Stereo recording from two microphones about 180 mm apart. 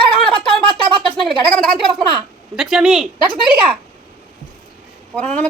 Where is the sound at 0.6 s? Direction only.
30° right (ahead or behind).